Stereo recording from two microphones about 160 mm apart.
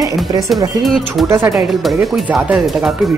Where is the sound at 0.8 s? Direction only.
Centre (ahead or behind).